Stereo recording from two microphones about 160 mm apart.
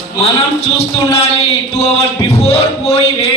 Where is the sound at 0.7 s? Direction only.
40° left (ahead or behind).